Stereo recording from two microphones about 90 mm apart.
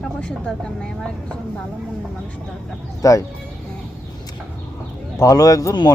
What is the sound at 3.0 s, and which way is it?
Speech, 40° left (ahead or behind).